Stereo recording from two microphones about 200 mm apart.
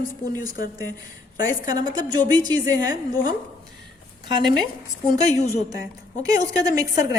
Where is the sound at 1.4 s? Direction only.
20° right (ahead or behind).